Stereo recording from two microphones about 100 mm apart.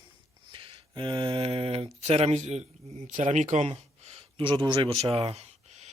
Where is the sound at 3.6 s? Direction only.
90° right.